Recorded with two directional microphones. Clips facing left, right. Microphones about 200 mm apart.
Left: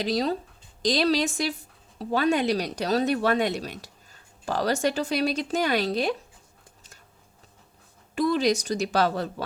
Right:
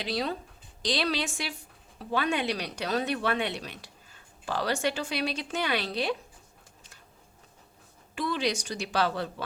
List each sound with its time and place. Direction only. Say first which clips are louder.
0.0 s speech: left 6 dB; 40° left (ahead or behind)
8.1 s speech: left 7 dB; 40° left (ahead or behind)